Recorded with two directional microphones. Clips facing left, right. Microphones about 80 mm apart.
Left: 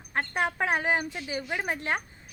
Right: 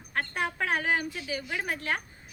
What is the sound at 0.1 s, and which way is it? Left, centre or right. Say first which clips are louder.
Speech: left 3 dB; left.